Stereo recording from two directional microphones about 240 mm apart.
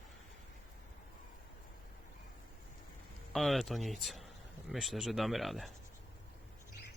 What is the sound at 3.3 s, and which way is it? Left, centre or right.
Speech, centre.